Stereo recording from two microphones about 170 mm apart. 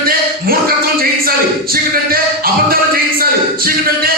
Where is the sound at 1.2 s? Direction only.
60° right (ahead or behind).